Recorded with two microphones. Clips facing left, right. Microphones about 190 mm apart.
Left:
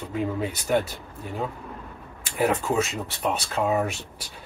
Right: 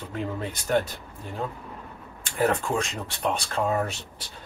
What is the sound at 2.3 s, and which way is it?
Speech, 10° left (ahead or behind).